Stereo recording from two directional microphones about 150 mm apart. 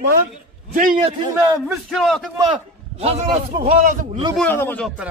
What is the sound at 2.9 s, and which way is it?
Speech, 45° right (ahead or behind).